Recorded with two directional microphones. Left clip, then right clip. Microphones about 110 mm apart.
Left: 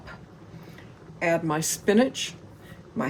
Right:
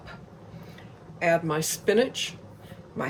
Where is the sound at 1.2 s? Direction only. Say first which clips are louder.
Right 1 dB; 90° left.